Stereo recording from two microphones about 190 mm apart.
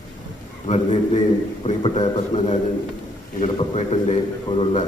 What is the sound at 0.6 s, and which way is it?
A man's voice, 35° left (ahead or behind).